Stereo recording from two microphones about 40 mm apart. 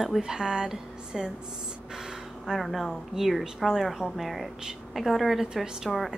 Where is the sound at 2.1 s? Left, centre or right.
Centre.